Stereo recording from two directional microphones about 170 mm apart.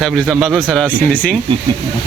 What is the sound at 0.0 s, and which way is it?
Speech, centre (ahead or behind).